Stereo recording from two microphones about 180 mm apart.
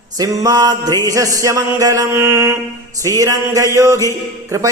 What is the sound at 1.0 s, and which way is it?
Mantra, 20° right (ahead or behind).